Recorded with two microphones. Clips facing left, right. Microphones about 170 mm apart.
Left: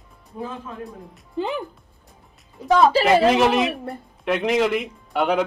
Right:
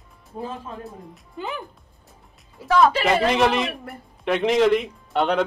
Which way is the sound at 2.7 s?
20° left (ahead or behind).